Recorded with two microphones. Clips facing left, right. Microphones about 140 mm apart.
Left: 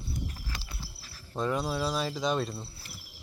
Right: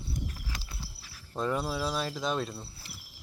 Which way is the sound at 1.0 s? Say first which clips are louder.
Left 1 dB; 5° right (ahead or behind).